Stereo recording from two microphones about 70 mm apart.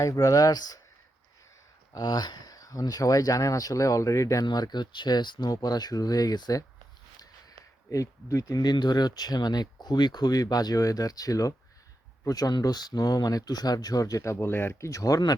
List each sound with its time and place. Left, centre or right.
0.0 s speech: left
1.9 s speech: left
4.4 s speech: left
5.6 s speech: left
7.9 s speech: left
8.6 s speech: left
14.3 s speech: left